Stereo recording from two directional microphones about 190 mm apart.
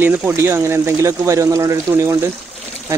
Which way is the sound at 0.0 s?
10° right (ahead or behind).